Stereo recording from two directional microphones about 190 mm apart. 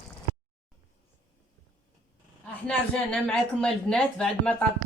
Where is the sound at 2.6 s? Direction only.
5° left (ahead or behind).